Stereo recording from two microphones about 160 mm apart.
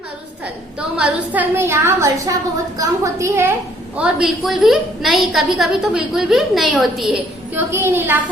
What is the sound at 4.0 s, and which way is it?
A woman's voice, centre (ahead or behind).